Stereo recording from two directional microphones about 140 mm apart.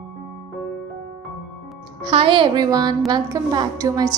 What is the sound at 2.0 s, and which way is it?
A woman's voice, 40° right (ahead or behind).